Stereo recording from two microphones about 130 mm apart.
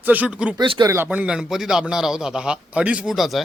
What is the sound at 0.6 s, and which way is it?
Speech, 35° right (ahead or behind).